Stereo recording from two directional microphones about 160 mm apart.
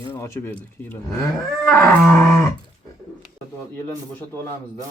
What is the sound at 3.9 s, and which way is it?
Speech, 15° left (ahead or behind).